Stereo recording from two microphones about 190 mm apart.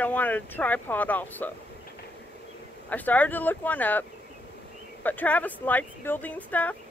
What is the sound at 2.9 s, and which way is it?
Speech, 10° left (ahead or behind).